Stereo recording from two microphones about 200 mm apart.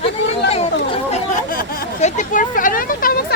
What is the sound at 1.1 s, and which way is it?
Speech, 35° left (ahead or behind).